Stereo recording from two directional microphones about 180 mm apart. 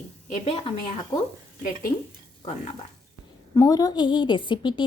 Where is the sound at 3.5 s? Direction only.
20° left (ahead or behind).